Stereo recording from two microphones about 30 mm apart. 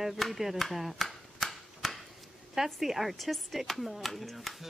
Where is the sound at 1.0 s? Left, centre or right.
Centre.